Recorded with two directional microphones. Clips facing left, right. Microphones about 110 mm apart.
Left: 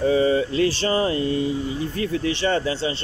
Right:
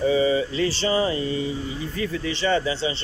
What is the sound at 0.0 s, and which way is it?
Mantra, 55° left (ahead or behind).